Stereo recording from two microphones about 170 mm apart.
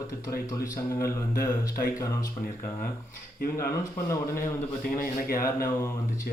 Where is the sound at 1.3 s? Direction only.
60° left (ahead or behind).